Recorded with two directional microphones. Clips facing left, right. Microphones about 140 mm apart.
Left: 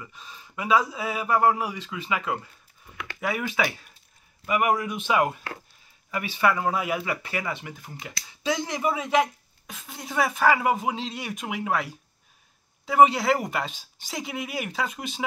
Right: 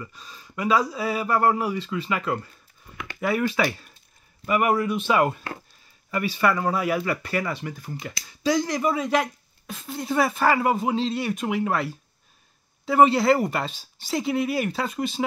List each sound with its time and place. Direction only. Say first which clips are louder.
0.0 s speech: right 3 dB; 15° left (ahead or behind)